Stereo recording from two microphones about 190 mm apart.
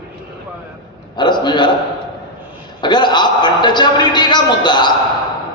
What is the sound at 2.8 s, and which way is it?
A man's voice, 25° left (ahead or behind).